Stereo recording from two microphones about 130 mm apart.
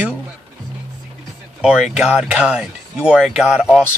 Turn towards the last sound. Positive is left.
turn(degrees=-5)  # may be behind; listen again after turning